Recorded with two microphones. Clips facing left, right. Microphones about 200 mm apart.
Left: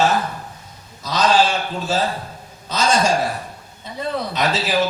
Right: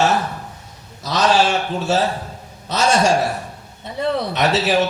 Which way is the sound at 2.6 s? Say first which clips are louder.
Right 2 dB; 75° right (ahead or behind).